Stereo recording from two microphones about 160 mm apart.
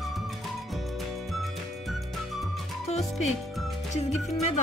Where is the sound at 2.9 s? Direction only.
40° left (ahead or behind).